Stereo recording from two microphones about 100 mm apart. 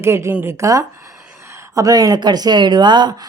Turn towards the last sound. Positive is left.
turn(degrees=-50)  # may be behind; listen again after turning